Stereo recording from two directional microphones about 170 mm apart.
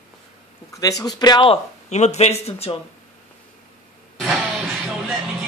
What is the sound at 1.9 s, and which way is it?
Speech, 40° left (ahead or behind).